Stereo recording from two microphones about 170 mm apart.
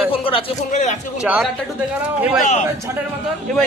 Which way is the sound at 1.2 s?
10° right (ahead or behind).